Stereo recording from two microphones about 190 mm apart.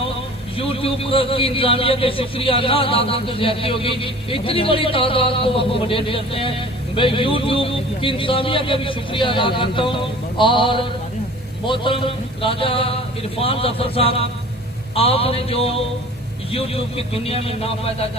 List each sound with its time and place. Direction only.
0.5 s a man's voice: 30° left (ahead or behind)